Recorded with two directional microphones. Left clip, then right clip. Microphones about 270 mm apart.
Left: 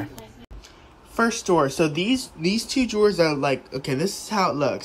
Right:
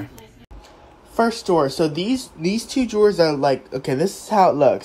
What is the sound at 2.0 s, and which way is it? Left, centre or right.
Speech, centre.